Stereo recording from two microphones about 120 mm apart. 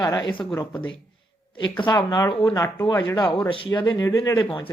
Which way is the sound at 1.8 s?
40° left (ahead or behind).